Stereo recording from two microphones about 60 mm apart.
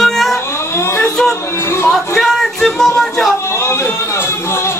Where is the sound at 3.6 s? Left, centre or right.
Left.